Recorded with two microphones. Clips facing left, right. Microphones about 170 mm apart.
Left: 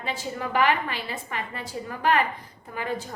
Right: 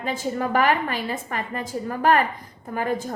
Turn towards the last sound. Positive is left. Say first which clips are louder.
# right 5 dB
turn(degrees=-45)  # may be behind; listen again after turning